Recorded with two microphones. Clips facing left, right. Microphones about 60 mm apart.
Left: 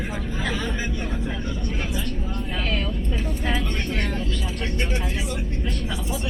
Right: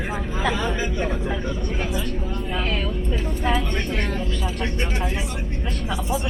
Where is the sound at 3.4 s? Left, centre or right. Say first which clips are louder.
Right 4 dB; centre.